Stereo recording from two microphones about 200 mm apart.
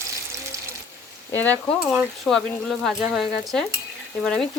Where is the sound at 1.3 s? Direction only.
10° left (ahead or behind).